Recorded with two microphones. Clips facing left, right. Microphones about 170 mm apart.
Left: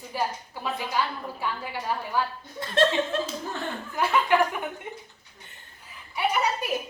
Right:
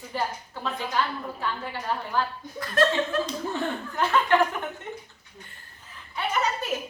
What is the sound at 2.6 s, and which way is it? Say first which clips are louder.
Speech: even; 25° left (ahead or behind).